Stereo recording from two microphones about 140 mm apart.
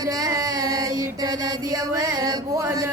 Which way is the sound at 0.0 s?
30° right (ahead or behind).